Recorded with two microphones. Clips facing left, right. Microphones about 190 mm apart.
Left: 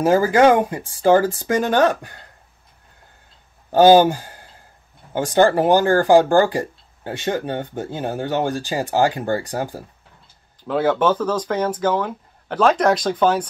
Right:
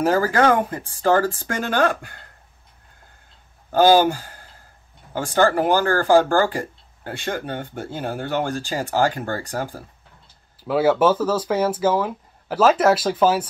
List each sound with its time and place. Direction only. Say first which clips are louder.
0.0 s speech: left 4 dB; 15° left (ahead or behind)
3.7 s speech: left 3 dB; 20° left (ahead or behind)
10.6 s speech: right 1 dB; 5° right (ahead or behind)